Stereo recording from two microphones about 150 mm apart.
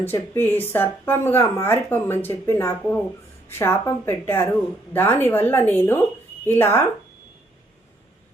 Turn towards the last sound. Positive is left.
turn(degrees=15)  # may be behind; listen again after turning